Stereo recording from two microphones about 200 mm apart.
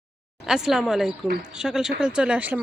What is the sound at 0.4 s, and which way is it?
Speech, 5° right (ahead or behind).